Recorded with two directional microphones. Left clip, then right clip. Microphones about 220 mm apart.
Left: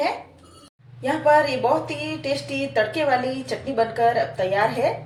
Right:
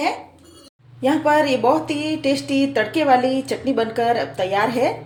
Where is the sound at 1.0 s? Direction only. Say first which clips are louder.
Right 1 dB; 50° right (ahead or behind).